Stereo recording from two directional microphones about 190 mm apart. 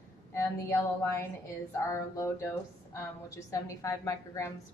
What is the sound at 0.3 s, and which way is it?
A woman's voice, 15° left (ahead or behind).